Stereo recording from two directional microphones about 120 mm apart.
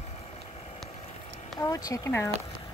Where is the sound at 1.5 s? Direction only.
30° left (ahead or behind).